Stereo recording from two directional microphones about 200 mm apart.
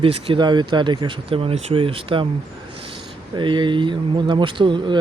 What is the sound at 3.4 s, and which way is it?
Speech, 25° right (ahead or behind).